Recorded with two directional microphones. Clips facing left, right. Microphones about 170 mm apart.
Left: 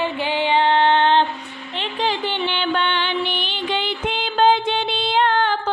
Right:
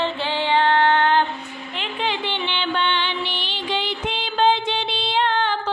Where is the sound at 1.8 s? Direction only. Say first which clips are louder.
Left 3 dB; 40° left (ahead or behind).